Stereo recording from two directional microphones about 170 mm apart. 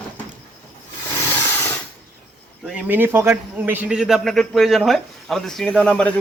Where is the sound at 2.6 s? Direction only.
5° right (ahead or behind).